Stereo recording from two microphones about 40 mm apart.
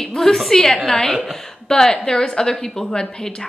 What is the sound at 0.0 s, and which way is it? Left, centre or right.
A woman's voice, centre.